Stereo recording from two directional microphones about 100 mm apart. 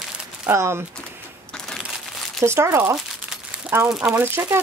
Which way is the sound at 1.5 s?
5° left (ahead or behind).